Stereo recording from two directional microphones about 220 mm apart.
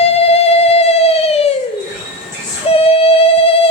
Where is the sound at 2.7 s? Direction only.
25° left (ahead or behind).